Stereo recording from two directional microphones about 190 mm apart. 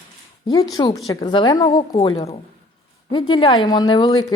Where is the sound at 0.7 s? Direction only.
20° left (ahead or behind).